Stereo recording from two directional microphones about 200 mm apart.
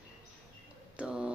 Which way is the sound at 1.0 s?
5° right (ahead or behind).